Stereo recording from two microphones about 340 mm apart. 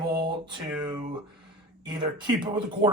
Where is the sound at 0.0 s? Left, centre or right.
Centre.